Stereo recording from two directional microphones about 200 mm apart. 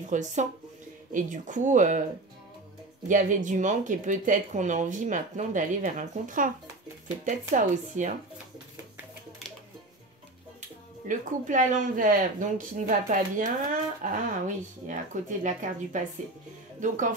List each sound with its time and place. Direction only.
0.1 s speech: 35° right (ahead or behind)
3.1 s speech: 40° right (ahead or behind)
11.1 s speech: 40° right (ahead or behind)